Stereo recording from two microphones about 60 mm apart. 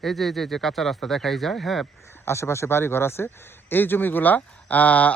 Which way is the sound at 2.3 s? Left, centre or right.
Left.